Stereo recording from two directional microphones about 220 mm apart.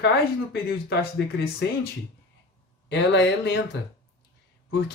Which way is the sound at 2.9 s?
50° left (ahead or behind).